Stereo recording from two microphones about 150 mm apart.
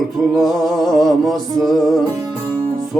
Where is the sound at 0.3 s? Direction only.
Centre (ahead or behind).